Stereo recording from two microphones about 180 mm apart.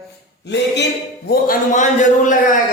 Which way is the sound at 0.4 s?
75° left (ahead or behind).